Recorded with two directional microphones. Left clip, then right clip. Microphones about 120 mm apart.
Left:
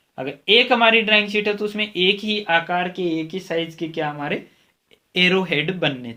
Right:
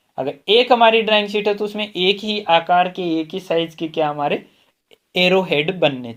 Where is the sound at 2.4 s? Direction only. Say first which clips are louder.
Right 6 dB; 60° right (ahead or behind).